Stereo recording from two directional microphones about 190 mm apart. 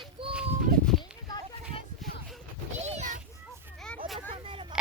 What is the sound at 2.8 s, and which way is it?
Children playing, 40° right (ahead or behind).